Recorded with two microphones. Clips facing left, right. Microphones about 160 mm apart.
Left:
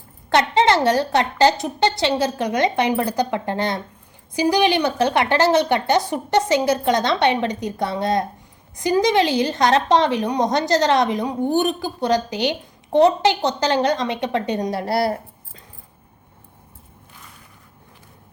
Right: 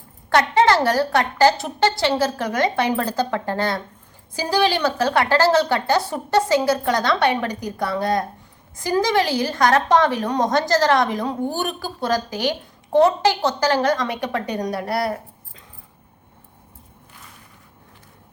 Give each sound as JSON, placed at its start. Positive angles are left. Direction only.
{"t": 0.3, "sound": "a woman's voice", "side_deg": 20}